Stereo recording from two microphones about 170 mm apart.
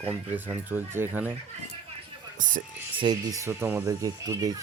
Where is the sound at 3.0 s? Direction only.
25° right (ahead or behind).